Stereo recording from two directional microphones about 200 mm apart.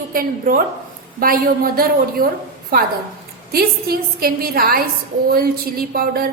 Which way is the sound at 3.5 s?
50° right (ahead or behind).